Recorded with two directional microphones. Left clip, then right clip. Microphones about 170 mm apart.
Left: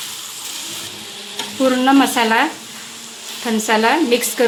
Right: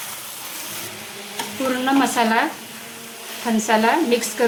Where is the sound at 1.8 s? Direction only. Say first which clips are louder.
Left 3 dB; 30° left (ahead or behind).